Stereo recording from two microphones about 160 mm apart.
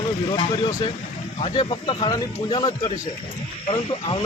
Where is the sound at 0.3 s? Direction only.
25° left (ahead or behind).